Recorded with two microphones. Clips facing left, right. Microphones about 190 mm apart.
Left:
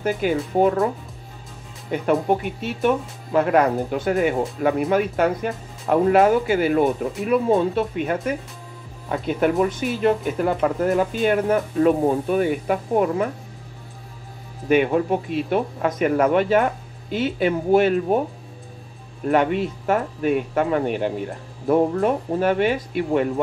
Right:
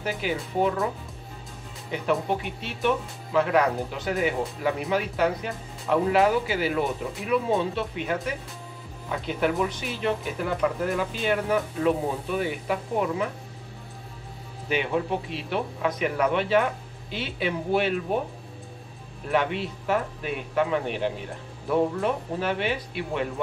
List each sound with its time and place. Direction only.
0.0 s speech: 50° left (ahead or behind)
1.9 s speech: 50° left (ahead or behind)
14.7 s speech: 50° left (ahead or behind)
19.3 s speech: 45° left (ahead or behind)